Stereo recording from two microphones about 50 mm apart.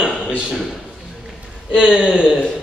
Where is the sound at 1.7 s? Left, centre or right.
Centre.